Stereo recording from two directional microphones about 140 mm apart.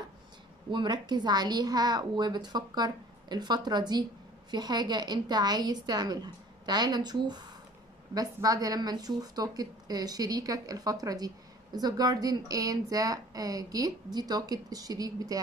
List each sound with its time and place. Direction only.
0.7 s speech: 30° right (ahead or behind)